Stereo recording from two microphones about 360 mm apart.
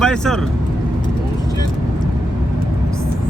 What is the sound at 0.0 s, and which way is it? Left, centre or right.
Speech, centre.